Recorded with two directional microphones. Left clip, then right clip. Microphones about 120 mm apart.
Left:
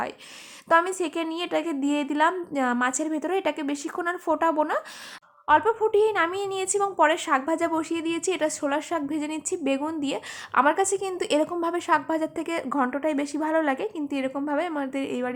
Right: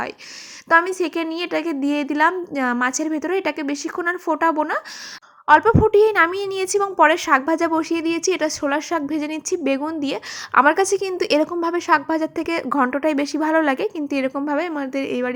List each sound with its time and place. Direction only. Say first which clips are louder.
0.7 s a woman's voice: right 5 dB; 20° right (ahead or behind)
5.5 s a woman's voice: right 7 dB; 35° right (ahead or behind)
10.5 s a woman's voice: right 6 dB; 35° right (ahead or behind)